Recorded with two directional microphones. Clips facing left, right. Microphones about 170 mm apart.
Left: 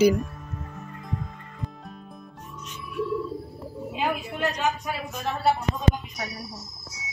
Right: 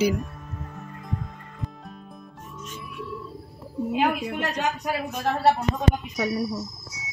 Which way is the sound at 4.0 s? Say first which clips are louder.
Right 2 dB; 75° right (ahead or behind).